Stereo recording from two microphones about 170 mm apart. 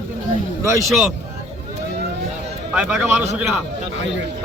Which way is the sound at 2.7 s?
5° right (ahead or behind).